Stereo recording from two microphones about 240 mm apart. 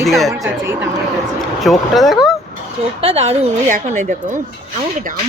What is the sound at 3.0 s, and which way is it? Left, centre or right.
A woman's voice, right.